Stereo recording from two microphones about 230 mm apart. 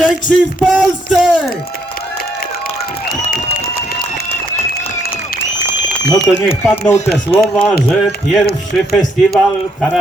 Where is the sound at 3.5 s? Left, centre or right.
Left.